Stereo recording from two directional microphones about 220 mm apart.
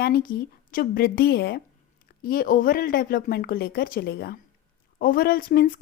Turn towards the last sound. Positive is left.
turn(degrees=40)  # may be behind; listen again after turning